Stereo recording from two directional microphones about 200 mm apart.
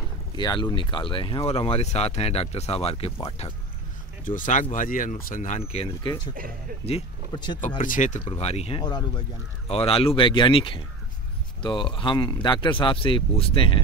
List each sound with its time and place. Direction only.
0.4 s speech: 20° left (ahead or behind)
4.2 s speech: 40° left (ahead or behind); by 7.5 s 20° left (ahead or behind)
7.6 s speech: 40° left (ahead or behind)